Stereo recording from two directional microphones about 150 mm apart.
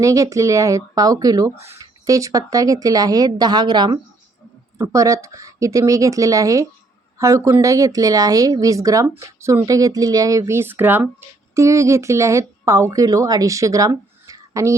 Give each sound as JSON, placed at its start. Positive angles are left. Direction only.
{"t": 0.0, "sound": "speech", "side_deg": -20}